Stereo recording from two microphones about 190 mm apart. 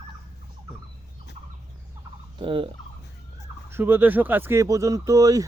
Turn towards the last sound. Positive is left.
turn(degrees=-20)  # may be behind; listen again after turning